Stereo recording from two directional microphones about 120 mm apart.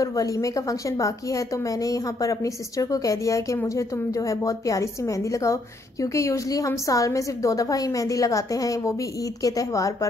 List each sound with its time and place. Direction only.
0.0 s a woman's voice: 30° left (ahead or behind)